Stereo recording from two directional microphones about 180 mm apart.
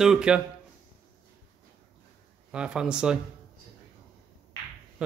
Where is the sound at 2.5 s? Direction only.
5° right (ahead or behind).